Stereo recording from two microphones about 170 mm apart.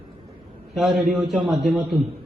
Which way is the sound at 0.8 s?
Centre (ahead or behind).